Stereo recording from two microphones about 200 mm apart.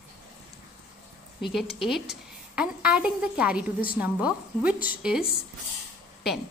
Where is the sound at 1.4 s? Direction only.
Centre (ahead or behind).